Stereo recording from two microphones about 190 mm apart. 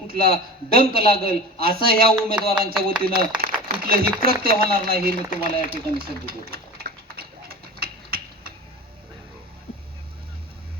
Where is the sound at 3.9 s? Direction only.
50° right (ahead or behind).